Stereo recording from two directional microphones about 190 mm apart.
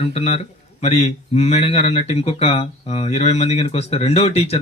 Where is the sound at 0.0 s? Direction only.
30° left (ahead or behind).